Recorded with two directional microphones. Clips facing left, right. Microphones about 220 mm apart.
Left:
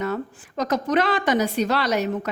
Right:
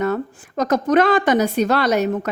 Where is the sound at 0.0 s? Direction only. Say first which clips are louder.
Right 5 dB; 50° right (ahead or behind).